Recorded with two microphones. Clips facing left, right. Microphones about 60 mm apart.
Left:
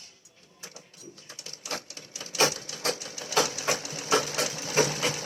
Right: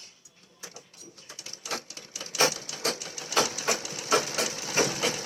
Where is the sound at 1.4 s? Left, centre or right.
Right.